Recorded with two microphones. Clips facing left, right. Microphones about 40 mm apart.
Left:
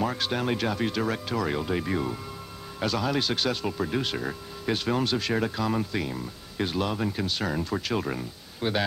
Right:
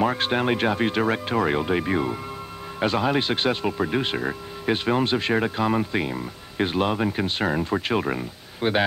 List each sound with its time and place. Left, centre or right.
0.0 s speech: right